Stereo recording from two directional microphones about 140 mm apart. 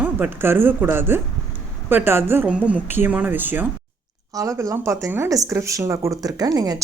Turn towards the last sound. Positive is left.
turn(degrees=-30)  # may be behind; listen again after turning